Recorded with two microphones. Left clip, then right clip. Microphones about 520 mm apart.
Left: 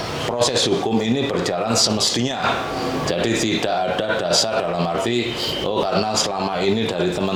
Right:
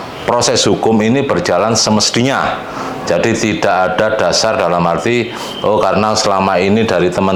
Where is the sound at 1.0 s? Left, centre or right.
Right.